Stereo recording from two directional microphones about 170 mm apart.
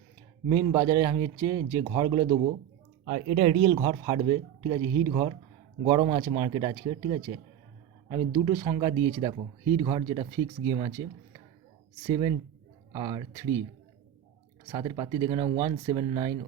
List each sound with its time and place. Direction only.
0.4 s speech: 20° right (ahead or behind)
3.0 s speech: 45° right (ahead or behind)
3.7 s speech: 25° right (ahead or behind)
8.3 s speech: 20° right (ahead or behind)
12.0 s speech: 25° right (ahead or behind)
14.7 s speech: 25° right (ahead or behind)